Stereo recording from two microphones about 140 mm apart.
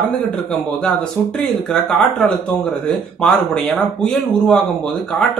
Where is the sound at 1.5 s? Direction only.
5° left (ahead or behind).